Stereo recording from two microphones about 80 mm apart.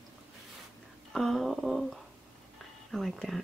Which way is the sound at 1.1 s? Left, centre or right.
Centre.